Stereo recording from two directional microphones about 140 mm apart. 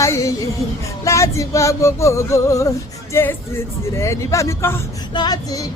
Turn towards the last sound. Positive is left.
turn(degrees=25)  # may be behind; listen again after turning